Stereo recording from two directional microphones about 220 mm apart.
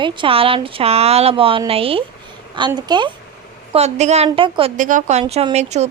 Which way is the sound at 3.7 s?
30° right (ahead or behind).